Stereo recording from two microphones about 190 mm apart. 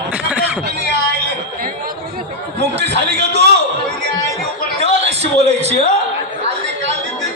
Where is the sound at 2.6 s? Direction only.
60° right (ahead or behind).